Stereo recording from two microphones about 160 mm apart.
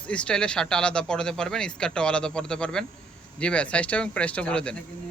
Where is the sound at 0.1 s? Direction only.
5° left (ahead or behind).